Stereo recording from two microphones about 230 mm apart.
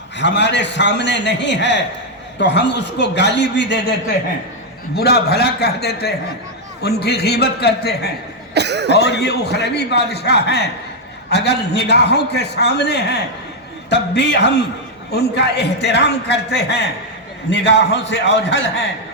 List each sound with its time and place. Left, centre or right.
0.2 s a man's voice: left
4.9 s a man's voice: left
8.5 s cough: right
9.0 s a man's voice: left